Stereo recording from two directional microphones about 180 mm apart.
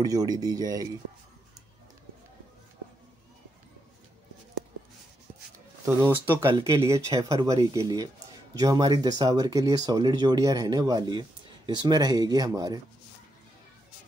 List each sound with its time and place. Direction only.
0.0 s speech: 20° right (ahead or behind)
5.9 s speech: 15° right (ahead or behind)